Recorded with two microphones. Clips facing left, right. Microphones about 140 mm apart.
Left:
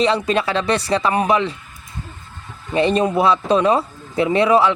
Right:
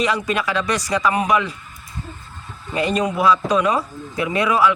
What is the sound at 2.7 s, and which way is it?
Speech, 25° left (ahead or behind).